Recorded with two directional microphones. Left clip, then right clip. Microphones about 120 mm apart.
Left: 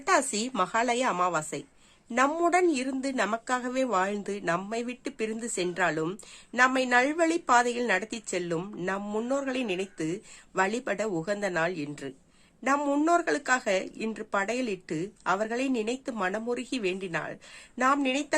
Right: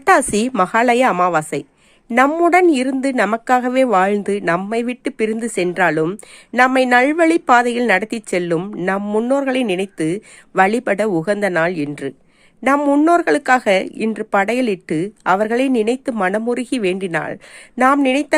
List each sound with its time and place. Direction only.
0.0 s a woman's voice: 70° right (ahead or behind); by 8.5 s 55° right (ahead or behind)
8.5 s speech: 40° right (ahead or behind); by 18.3 s 65° right (ahead or behind)